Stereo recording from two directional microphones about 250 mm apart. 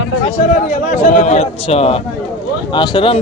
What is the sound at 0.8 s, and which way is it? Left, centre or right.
A man's voice, left.